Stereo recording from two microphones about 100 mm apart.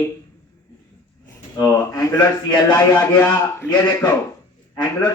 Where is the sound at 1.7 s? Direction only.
30° left (ahead or behind).